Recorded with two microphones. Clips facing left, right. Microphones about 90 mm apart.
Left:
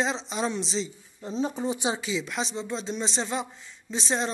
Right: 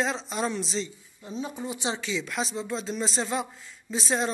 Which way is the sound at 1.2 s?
30° left (ahead or behind).